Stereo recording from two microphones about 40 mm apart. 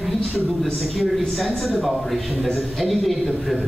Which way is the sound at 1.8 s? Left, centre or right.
Centre.